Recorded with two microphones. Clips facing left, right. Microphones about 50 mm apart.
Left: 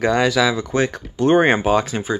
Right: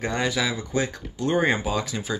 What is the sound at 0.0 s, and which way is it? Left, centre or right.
Speech, left.